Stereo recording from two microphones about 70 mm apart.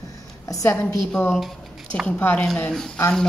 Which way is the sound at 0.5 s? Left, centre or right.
Left.